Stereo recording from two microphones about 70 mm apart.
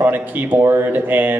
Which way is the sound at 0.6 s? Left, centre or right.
Right.